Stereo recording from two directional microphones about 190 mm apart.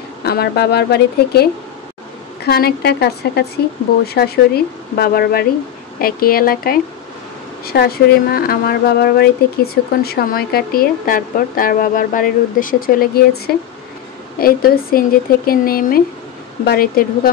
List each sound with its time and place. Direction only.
0.2 s speech: 55° left (ahead or behind)
14.4 s speech: 50° left (ahead or behind)